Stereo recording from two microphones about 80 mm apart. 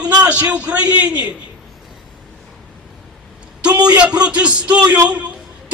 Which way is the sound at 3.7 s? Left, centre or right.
Right.